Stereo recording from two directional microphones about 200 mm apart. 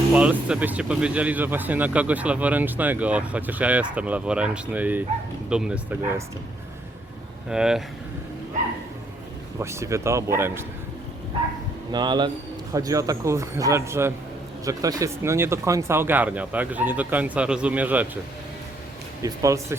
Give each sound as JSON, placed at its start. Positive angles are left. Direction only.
{"t": 0.1, "sound": "speech", "side_deg": -5}
{"t": 7.5, "sound": "speech", "side_deg": -5}
{"t": 9.6, "sound": "speech", "side_deg": -15}
{"t": 11.9, "sound": "speech", "side_deg": -20}
{"t": 19.2, "sound": "speech", "side_deg": -15}